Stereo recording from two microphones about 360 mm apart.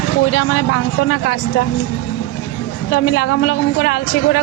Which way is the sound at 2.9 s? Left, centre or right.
Left.